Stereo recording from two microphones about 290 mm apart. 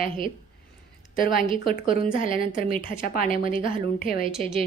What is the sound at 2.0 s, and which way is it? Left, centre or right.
Speech, left.